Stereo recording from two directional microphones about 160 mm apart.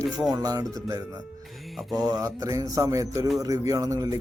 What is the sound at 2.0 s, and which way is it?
Speech, 20° right (ahead or behind).